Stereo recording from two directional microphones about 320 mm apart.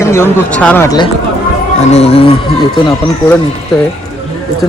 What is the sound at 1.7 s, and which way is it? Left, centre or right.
Speech, centre.